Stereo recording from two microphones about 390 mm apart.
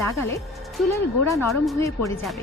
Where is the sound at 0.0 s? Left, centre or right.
Centre.